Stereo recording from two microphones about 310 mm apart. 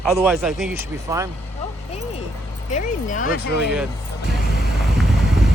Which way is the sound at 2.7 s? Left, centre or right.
Left.